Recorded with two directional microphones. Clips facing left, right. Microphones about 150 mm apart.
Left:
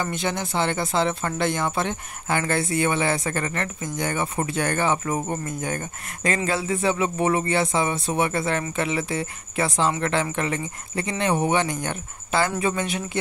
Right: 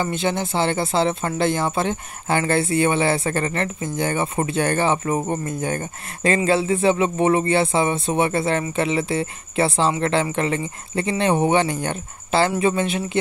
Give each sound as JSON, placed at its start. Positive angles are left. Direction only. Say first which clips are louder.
{"t": 0.0, "sound": "speech", "louder": "right 4 dB", "side_deg": -25}